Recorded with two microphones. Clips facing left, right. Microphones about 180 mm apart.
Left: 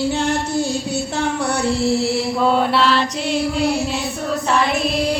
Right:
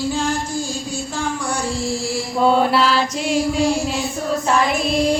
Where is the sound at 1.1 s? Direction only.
65° left (ahead or behind).